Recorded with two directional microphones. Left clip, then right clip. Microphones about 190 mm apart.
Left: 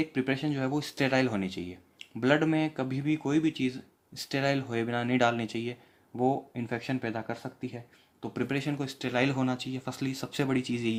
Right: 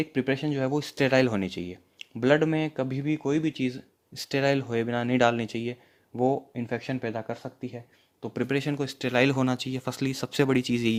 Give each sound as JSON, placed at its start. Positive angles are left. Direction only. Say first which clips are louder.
{"t": 0.0, "sound": "speech", "louder": "right 3 dB", "side_deg": -35}
{"t": 8.2, "sound": "speech", "louder": "right 4 dB", "side_deg": -35}